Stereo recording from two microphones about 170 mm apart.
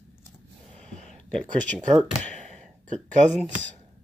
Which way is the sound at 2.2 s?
5° left (ahead or behind).